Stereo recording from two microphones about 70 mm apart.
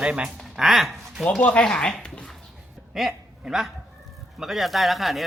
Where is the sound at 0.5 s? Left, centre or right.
Centre.